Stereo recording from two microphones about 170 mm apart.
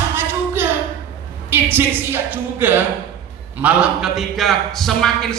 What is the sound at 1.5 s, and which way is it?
A woman's voice, 10° right (ahead or behind).